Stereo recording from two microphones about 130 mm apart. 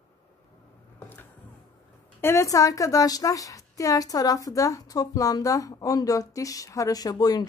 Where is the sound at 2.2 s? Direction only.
25° left (ahead or behind).